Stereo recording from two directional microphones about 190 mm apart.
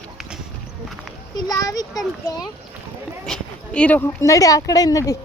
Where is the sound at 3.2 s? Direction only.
5° left (ahead or behind).